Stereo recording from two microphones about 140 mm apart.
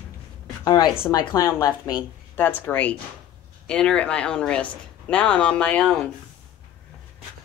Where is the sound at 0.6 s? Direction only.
30° left (ahead or behind).